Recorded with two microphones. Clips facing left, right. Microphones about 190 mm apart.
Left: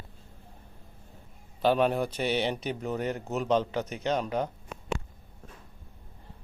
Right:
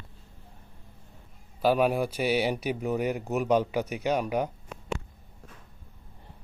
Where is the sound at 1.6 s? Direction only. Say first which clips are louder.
Right 1 dB; 5° right (ahead or behind).